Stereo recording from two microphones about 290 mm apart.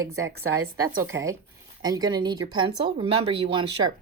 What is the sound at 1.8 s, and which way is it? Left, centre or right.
Speech, centre.